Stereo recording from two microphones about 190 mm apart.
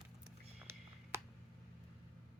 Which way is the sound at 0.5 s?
15° right (ahead or behind).